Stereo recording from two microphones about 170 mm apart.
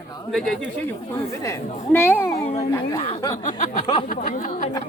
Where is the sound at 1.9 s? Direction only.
10° left (ahead or behind).